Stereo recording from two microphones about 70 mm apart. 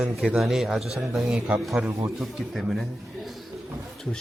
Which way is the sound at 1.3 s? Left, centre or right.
Centre.